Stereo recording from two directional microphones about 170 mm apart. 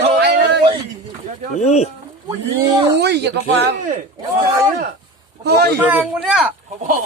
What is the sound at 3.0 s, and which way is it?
Speech, 75° right (ahead or behind).